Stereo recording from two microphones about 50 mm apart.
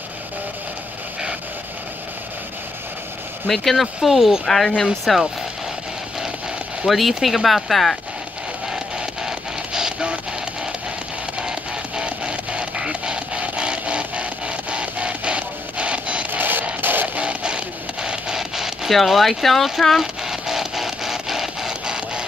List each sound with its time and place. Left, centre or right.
3.4 s speech: centre
3.8 s speech: centre
4.5 s speech: centre
6.9 s speech: centre
9.8 s printer: centre
12.0 s printer: right
16.3 s a sound: right
16.8 s music: right
17.2 s a sound: centre